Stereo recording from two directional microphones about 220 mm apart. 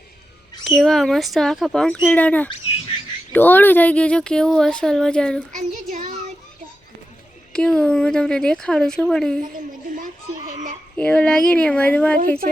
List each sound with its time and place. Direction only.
0.6 s speech: centre (ahead or behind)
5.5 s child singing: 30° right (ahead or behind)
7.5 s speech: 5° left (ahead or behind)
10.9 s speech: 5° left (ahead or behind)